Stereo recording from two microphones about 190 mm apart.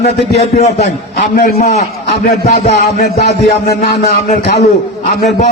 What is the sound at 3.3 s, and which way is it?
Speech, 60° left (ahead or behind).